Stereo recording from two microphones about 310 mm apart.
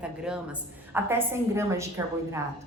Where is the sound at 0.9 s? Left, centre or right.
Centre.